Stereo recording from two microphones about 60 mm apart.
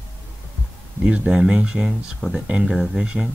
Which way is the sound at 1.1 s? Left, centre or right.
Centre.